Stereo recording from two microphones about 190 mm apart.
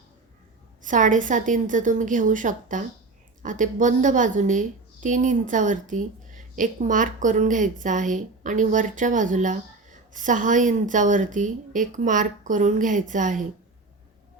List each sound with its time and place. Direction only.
0.8 s a woman's voice: 40° right (ahead or behind)